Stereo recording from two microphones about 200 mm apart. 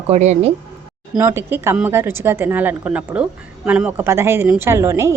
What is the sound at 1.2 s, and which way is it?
A woman's voice, 10° right (ahead or behind).